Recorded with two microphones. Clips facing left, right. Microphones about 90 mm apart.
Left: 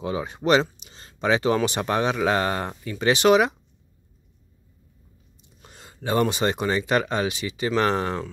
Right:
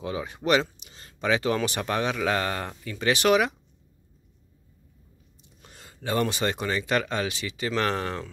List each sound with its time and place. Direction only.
0.0 s speech: 25° left (ahead or behind)
5.6 s speech: 20° left (ahead or behind)